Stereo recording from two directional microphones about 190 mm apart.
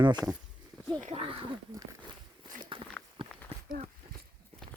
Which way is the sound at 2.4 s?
25° right (ahead or behind).